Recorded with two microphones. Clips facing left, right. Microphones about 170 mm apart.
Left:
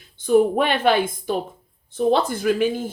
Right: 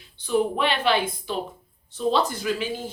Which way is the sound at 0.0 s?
50° left (ahead or behind).